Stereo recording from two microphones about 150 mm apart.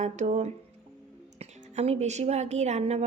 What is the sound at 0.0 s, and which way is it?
A woman's voice, 50° right (ahead or behind).